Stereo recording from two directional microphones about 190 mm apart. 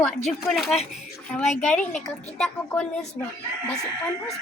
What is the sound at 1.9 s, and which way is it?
Speech, 40° left (ahead or behind).